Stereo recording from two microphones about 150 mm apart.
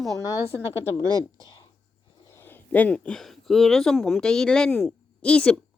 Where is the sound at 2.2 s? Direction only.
15° left (ahead or behind).